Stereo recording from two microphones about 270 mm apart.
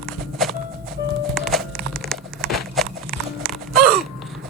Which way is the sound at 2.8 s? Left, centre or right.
Centre.